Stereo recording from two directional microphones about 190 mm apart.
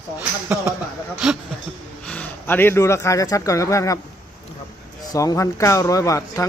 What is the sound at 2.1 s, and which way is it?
A man's voice, 10° left (ahead or behind).